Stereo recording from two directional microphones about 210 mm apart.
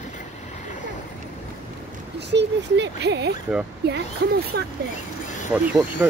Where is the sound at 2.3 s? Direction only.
55° right (ahead or behind).